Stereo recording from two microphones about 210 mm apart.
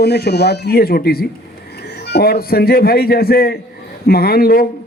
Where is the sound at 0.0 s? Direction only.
50° left (ahead or behind).